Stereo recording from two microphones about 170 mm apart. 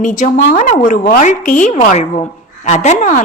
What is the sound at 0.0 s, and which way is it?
A woman's voice, 50° left (ahead or behind).